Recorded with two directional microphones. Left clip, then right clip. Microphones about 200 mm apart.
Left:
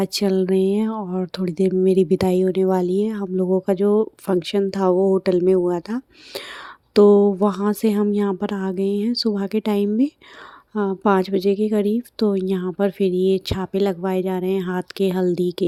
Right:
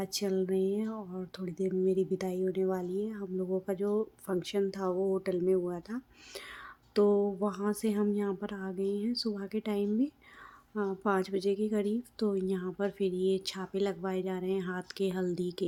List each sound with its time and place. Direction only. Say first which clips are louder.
0.0 s a woman's voice: left 12 dB; 35° left (ahead or behind)